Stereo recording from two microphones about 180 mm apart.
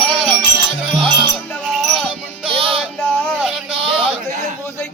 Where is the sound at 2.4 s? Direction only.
30° right (ahead or behind).